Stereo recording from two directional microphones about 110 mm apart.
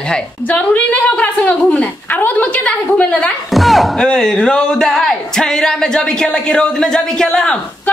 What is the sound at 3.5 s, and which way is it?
A woman's voice, centre (ahead or behind).